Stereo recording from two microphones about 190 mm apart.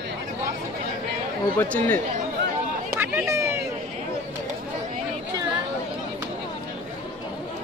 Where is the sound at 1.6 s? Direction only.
10° left (ahead or behind).